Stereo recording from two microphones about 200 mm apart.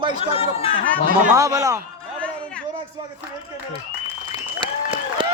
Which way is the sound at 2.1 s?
5° left (ahead or behind).